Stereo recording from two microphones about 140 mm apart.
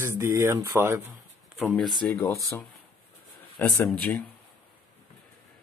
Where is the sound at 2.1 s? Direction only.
15° left (ahead or behind).